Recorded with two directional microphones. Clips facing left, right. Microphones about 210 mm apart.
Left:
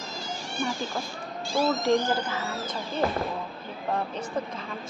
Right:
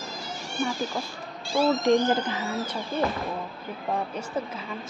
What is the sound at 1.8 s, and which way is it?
Speech, 15° right (ahead or behind).